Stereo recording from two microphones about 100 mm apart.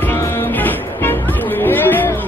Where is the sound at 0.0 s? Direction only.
25° left (ahead or behind).